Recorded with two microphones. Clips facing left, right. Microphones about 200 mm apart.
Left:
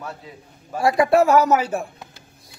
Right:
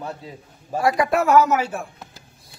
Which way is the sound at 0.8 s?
30° left (ahead or behind).